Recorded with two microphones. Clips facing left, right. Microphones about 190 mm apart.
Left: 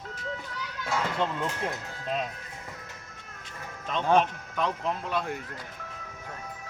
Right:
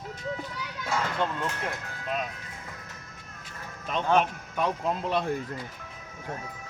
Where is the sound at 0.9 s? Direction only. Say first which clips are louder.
Even; centre (ahead or behind).